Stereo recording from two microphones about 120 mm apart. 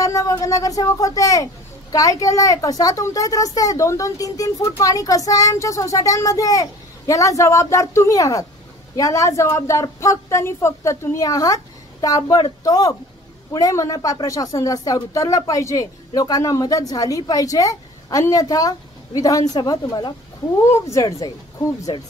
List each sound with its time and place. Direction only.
0.0 s speech: 25° left (ahead or behind)
21.9 s speech: 40° left (ahead or behind)